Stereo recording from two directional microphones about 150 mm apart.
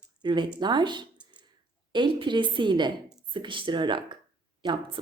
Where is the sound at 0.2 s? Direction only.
30° right (ahead or behind).